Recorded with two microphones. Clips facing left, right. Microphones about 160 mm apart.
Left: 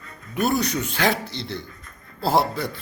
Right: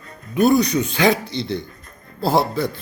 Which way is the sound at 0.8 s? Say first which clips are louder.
Right 5 dB; 5° left (ahead or behind).